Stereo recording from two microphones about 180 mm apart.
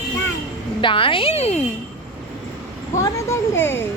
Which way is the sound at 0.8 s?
30° left (ahead or behind).